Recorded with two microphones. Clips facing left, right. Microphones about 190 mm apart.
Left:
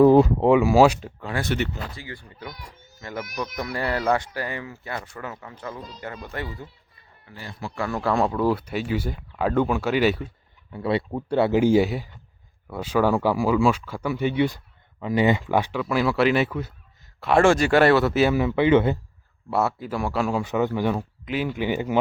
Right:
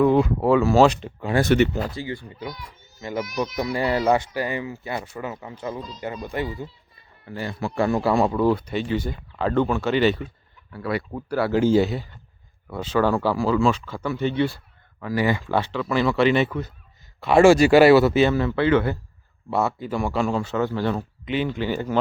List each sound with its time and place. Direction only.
0.0 s speech: 35° left (ahead or behind)
0.4 s speech: 15° left (ahead or behind)
1.5 s speech: 75° right (ahead or behind)
2.0 s speech: 25° right (ahead or behind)
7.3 s speech: 65° right (ahead or behind)
7.8 s speech: 20° right (ahead or behind)
8.0 s speech: centre (ahead or behind)
10.7 s speech: 25° left (ahead or behind)
19.5 s speech: 5° left (ahead or behind)
20.4 s speech: 15° left (ahead or behind)